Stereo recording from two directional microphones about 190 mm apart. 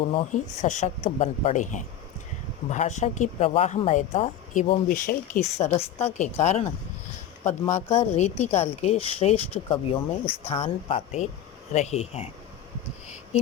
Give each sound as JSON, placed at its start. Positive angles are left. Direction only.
{"t": 0.1, "sound": "speech", "side_deg": 35}
{"t": 4.9, "sound": "speech", "side_deg": 45}
{"t": 7.7, "sound": "speech", "side_deg": 35}
{"t": 10.2, "sound": "speech", "side_deg": 10}
{"t": 10.5, "sound": "speech", "side_deg": 30}